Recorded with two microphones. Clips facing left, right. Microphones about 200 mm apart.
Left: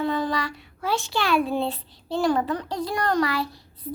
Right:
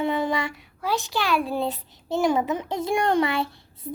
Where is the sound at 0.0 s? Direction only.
25° right (ahead or behind).